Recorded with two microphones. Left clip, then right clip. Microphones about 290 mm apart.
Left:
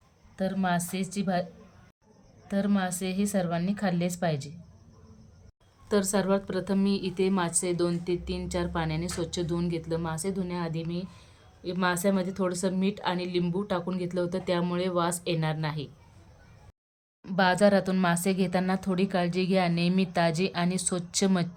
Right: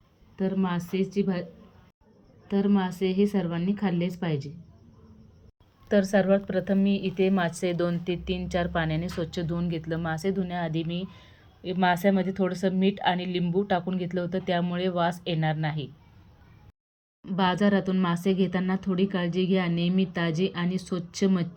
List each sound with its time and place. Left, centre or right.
0.3 s a woman's voice: centre
2.5 s a woman's voice: centre
2.9 s speech: left
3.2 s a woman's voice: centre
5.9 s a woman's voice: centre
17.2 s a woman's voice: centre